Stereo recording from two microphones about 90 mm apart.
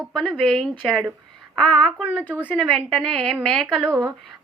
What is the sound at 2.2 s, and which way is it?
Speech, 15° right (ahead or behind).